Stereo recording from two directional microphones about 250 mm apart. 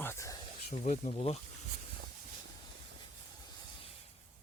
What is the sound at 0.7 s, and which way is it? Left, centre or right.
Speech, left.